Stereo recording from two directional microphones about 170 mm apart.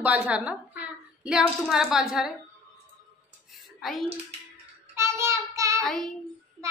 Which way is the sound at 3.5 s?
Centre (ahead or behind).